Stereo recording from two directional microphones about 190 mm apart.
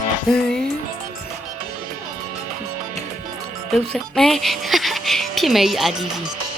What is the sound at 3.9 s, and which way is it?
Speech, centre (ahead or behind).